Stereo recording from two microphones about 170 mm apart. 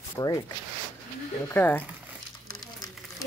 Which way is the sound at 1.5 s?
10° left (ahead or behind).